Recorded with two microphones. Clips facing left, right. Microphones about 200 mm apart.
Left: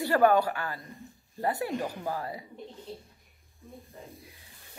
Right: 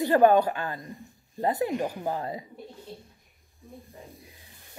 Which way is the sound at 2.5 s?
5° right (ahead or behind).